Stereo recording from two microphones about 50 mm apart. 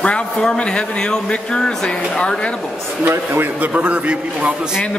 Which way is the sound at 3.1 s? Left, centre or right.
Right.